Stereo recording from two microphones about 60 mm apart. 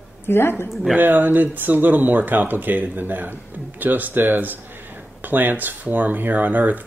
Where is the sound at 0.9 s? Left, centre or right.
Right.